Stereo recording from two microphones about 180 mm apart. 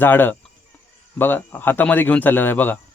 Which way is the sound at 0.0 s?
10° left (ahead or behind).